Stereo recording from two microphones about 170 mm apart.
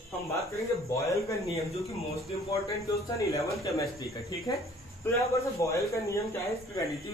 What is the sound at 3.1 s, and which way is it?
Speech, 20° left (ahead or behind).